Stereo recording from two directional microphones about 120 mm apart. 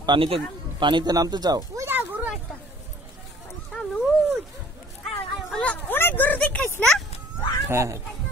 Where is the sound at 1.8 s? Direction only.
15° right (ahead or behind).